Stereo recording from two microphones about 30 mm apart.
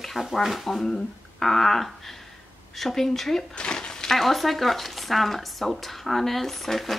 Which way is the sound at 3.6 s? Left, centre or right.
Left.